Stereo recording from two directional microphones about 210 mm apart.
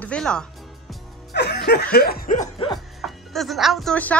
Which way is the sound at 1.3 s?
55° left (ahead or behind).